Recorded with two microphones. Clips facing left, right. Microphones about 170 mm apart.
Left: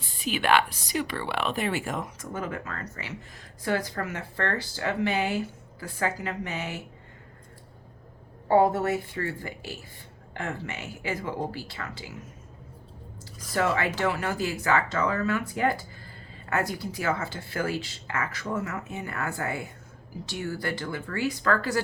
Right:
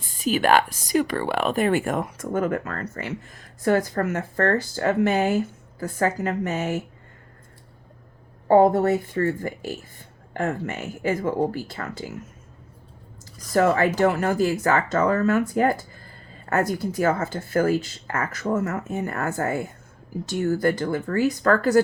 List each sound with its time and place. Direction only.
0.0 s speech: 45° right (ahead or behind)
8.4 s speech: 45° right (ahead or behind)
13.5 s speech: 45° right (ahead or behind)